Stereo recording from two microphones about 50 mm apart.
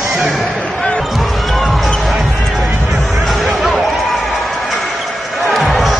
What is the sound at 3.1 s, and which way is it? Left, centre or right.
Music, centre.